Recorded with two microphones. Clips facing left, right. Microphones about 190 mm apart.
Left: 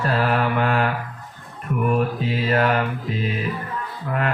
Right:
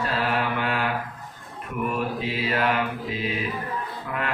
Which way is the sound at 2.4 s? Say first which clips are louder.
Left 5 dB; 45° left (ahead or behind).